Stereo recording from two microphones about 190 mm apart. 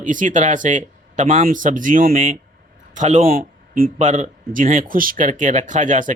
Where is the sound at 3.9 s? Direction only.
40° right (ahead or behind).